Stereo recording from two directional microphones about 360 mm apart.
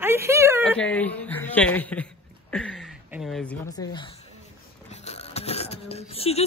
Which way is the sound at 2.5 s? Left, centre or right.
Centre.